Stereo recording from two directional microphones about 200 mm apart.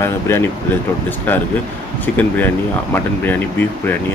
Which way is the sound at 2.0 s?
10° left (ahead or behind).